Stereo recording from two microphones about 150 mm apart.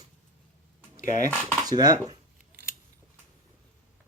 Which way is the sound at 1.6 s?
25° right (ahead or behind).